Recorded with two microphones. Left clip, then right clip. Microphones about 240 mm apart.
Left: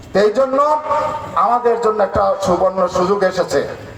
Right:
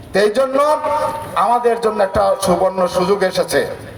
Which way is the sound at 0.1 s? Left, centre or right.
Right.